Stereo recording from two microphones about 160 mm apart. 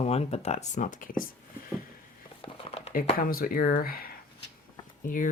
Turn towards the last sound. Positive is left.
turn(degrees=55)  # may be behind; listen again after turning